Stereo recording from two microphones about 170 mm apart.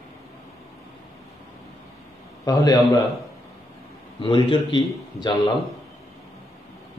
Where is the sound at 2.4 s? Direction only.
20° left (ahead or behind).